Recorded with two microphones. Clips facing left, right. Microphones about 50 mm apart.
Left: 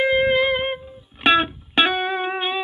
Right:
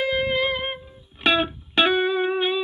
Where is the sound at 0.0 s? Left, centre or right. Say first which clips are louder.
Left 5 dB; left.